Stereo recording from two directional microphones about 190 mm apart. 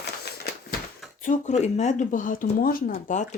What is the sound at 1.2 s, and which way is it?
Speech, 40° left (ahead or behind).